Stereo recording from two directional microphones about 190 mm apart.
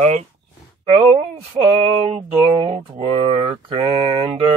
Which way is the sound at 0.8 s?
30° right (ahead or behind).